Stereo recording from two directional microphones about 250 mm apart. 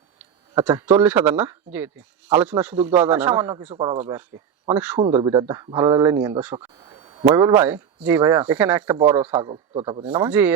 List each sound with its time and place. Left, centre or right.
0.2 s speech: centre
3.7 s a man's voice: right
4.0 s speech: centre
4.9 s speech: centre
10.1 s speech: centre